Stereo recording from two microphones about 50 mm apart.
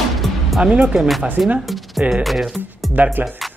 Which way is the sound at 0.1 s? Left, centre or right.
Centre.